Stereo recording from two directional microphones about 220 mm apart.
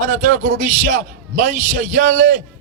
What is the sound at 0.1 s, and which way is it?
A man's voice, 35° right (ahead or behind).